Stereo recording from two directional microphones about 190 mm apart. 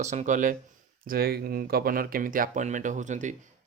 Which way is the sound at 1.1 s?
55° right (ahead or behind).